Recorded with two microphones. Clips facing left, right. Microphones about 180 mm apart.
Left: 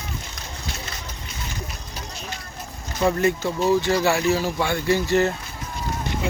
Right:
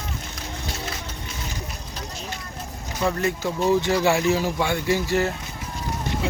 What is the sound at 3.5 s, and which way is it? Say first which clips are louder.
Speech: left 1 dB; 5° left (ahead or behind).